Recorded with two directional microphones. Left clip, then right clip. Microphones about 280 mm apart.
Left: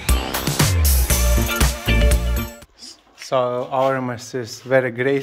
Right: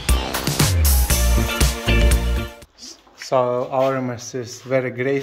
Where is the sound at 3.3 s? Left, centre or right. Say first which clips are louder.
Right 1 dB; centre.